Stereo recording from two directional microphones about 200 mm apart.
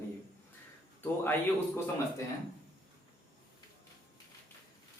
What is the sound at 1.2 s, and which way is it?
Speech, 10° left (ahead or behind).